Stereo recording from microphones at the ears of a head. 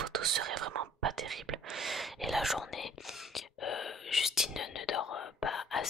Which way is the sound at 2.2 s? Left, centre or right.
Centre.